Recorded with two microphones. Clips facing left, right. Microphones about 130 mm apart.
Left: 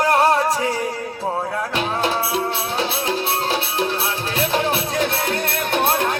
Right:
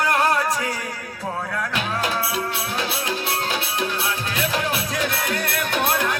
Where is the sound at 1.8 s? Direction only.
30° left (ahead or behind).